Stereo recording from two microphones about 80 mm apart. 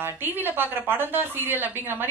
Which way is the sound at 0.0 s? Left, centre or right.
Right.